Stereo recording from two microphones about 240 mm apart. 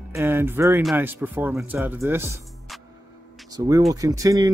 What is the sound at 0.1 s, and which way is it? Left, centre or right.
Speech, centre.